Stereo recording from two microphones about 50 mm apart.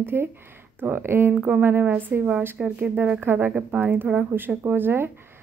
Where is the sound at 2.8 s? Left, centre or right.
Right.